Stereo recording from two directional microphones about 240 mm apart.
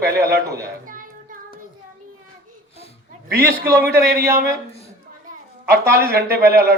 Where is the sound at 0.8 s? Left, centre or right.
Right.